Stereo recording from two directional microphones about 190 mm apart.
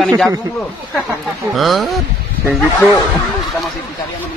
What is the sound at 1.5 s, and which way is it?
Speech, centre (ahead or behind).